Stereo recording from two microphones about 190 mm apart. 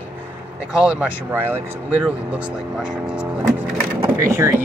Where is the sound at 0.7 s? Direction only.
5° right (ahead or behind).